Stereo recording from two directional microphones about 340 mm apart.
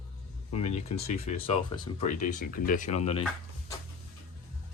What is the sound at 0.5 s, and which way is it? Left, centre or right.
Speech, centre.